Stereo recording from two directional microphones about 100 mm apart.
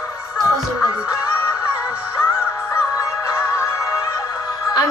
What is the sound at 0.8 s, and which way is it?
Music, 35° left (ahead or behind).